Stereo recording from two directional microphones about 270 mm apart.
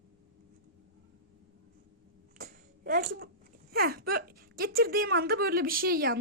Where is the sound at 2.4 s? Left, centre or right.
Right.